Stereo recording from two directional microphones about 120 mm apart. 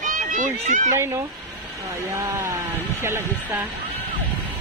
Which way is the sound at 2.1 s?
20° right (ahead or behind).